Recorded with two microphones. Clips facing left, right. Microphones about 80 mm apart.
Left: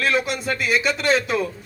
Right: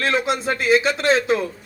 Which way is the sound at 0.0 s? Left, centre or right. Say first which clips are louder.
Right 1 dB; right.